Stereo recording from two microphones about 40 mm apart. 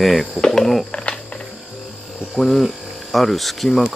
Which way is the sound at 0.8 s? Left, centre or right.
Left.